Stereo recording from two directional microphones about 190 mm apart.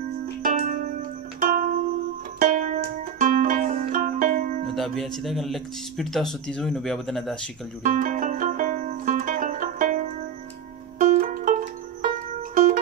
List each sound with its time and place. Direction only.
0.4 s music: 45° right (ahead or behind)
4.7 s speech: centre (ahead or behind)
7.8 s music: 40° right (ahead or behind)